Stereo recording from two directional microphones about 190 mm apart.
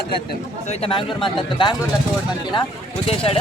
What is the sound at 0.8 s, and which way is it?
Speech, 25° left (ahead or behind).